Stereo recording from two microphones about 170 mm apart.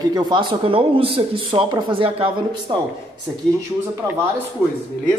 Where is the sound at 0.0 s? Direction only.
25° right (ahead or behind).